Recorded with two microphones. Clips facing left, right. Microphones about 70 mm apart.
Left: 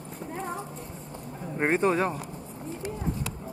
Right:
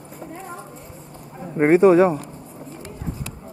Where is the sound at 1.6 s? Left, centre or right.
Centre.